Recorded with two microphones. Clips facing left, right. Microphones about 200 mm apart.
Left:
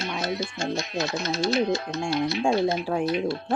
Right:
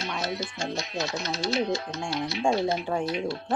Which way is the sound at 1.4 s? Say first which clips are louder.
Left 3 dB; 55° left (ahead or behind).